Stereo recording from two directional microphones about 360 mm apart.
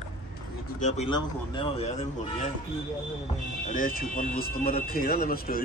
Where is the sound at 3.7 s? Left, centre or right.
Left.